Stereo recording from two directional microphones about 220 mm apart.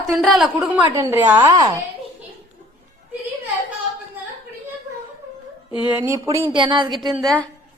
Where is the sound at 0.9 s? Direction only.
10° right (ahead or behind).